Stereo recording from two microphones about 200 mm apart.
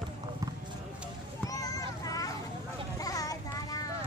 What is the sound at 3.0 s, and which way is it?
Child singing, 15° left (ahead or behind).